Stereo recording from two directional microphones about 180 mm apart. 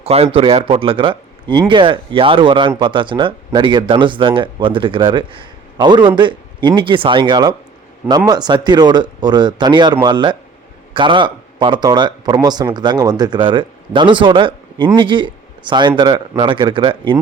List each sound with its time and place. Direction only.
0.0 s speech: 35° right (ahead or behind)